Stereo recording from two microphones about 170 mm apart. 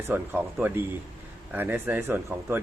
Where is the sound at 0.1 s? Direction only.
10° right (ahead or behind).